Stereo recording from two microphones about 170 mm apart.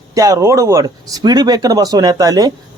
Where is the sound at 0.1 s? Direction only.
20° right (ahead or behind).